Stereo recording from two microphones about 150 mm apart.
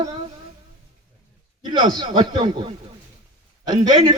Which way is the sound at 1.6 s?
30° right (ahead or behind).